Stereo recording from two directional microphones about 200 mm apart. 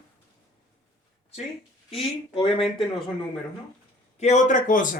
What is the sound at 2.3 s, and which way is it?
Speech, 25° left (ahead or behind).